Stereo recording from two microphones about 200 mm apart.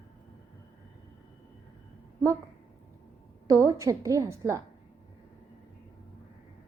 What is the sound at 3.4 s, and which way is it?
A woman's voice, 15° right (ahead or behind).